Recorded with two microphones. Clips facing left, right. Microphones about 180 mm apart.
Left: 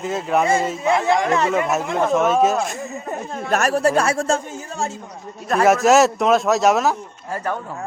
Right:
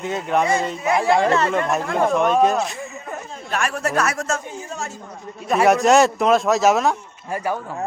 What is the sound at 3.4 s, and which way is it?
Speech, 40° left (ahead or behind).